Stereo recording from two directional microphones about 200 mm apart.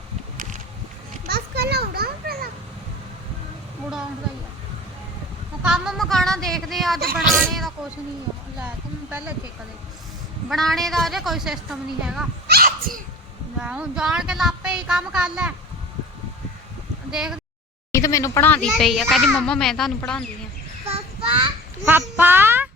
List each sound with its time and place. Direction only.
1.3 s children playing: 55° right (ahead or behind)
5.6 s a sound: 5° right (ahead or behind)
7.3 s a child's voice: centre (ahead or behind)
10.5 s a child's voice: centre (ahead or behind)
12.5 s dog: 50° right (ahead or behind)
13.6 s a child's voice: 5° right (ahead or behind)
17.1 s a child's voice: 5° right (ahead or behind)
17.9 s a child's voice: 15° left (ahead or behind)
21.8 s a sound: 10° right (ahead or behind)